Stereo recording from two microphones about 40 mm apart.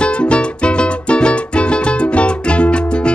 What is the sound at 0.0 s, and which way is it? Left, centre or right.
Music, left.